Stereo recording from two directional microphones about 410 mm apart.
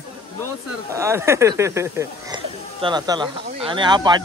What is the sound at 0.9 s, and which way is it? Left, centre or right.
Speech, centre.